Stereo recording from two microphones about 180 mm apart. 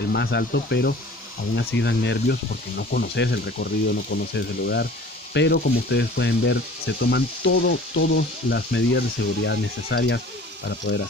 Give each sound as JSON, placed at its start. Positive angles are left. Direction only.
{"t": 0.1, "sound": "speech", "side_deg": 70}
{"t": 2.8, "sound": "speech", "side_deg": 60}
{"t": 10.9, "sound": "speech", "side_deg": 60}